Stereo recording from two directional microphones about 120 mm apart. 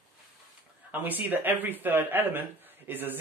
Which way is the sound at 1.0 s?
15° right (ahead or behind).